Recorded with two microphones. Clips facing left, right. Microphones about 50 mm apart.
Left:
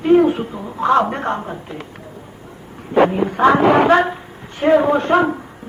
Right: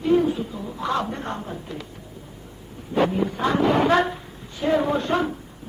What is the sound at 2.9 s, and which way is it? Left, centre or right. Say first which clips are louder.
Speech: left 7 dB; left.